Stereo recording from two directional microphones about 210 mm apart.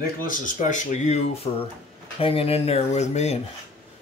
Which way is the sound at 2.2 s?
25° left (ahead or behind).